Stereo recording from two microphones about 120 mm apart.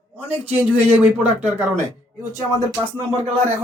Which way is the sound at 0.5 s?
10° right (ahead or behind).